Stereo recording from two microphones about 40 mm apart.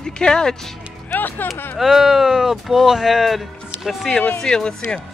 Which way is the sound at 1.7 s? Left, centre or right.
Centre.